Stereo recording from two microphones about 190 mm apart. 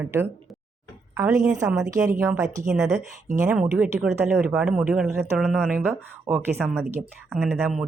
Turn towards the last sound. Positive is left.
turn(degrees=-10)  # may be behind; listen again after turning